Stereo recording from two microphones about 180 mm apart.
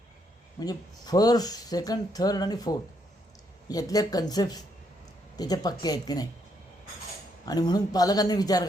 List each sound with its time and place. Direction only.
0.6 s speech: 20° left (ahead or behind)
7.4 s speech: 20° left (ahead or behind)